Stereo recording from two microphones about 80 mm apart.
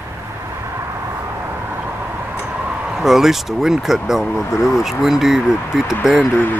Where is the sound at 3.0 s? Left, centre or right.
Centre.